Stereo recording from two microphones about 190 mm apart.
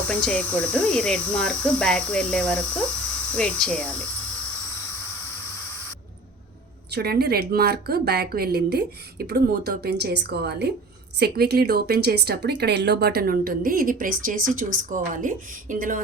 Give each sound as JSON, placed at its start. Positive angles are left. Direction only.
{"t": 0.1, "sound": "speech", "side_deg": 5}
{"t": 6.9, "sound": "a woman's voice", "side_deg": -55}